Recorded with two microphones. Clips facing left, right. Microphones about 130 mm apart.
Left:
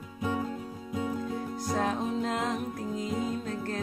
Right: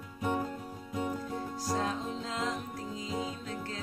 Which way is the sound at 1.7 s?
60° left (ahead or behind).